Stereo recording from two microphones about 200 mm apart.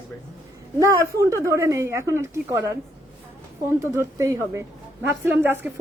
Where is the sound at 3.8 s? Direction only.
15° right (ahead or behind).